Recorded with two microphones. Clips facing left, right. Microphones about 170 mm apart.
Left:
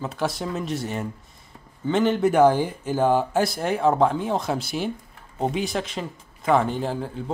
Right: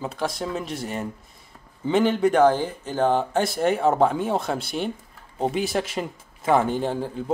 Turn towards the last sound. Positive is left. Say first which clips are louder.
# right 2 dB
turn(degrees=0)  # may be behind; listen again after turning